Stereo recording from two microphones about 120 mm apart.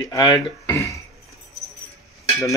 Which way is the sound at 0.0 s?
30° left (ahead or behind).